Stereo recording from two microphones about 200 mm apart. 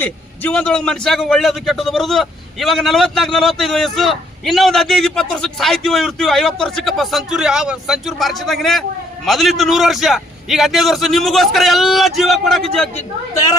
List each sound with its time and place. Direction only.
0.0 s a man's voice: 5° left (ahead or behind)
13.3 s a woman's voice: 15° left (ahead or behind)